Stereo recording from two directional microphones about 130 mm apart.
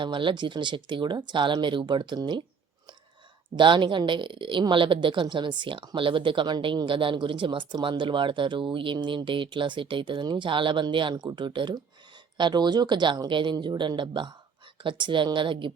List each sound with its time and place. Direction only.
0.0 s a woman's voice: 40° right (ahead or behind)
3.5 s a woman's voice: 35° right (ahead or behind)